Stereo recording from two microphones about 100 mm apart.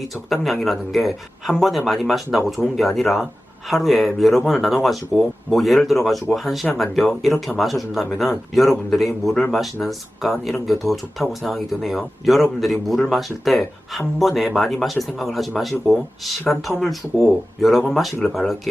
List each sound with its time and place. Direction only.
0.3 s speech: centre (ahead or behind)